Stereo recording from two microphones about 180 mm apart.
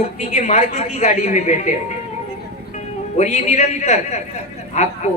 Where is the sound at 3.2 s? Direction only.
40° left (ahead or behind).